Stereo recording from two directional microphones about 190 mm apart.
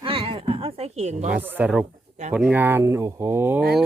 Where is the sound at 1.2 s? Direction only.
10° right (ahead or behind).